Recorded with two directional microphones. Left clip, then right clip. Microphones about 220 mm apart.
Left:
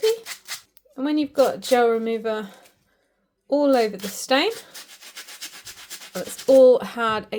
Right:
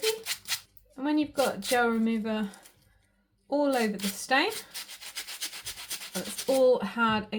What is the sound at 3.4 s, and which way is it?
Speech, 45° left (ahead or behind).